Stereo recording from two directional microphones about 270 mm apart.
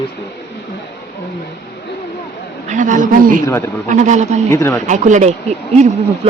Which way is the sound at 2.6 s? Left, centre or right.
Right.